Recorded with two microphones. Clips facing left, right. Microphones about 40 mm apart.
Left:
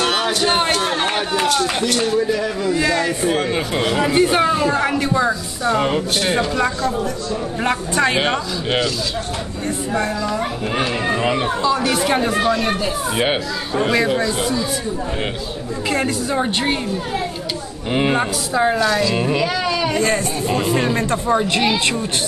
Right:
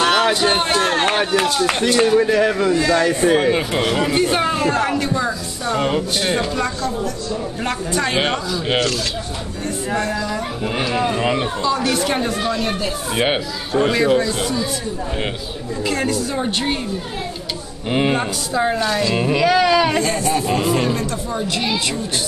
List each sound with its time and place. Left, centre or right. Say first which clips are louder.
0.0 s a sound: right 3 dB; right
2.0 s speech: right 6 dB; right
2.7 s speech: right 2 dB; centre
3.2 s speech: right 4 dB; centre
8.2 s speech: even; centre
9.9 s speech: left 1 dB; left
11.1 s speech: left 1 dB; centre
12.8 s speech: left 1 dB; centre
15.9 s speech: left 1 dB; centre
17.9 s speech: left 1 dB; centre
19.0 s speech: even; centre
19.4 s speech: right 5 dB; right
20.5 s speech: left 3 dB; centre
20.9 s speech: left 5 dB; left